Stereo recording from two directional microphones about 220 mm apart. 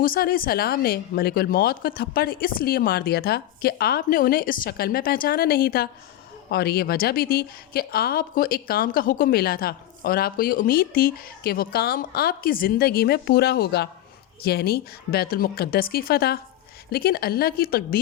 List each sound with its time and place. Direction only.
0.0 s a woman's voice: 40° left (ahead or behind)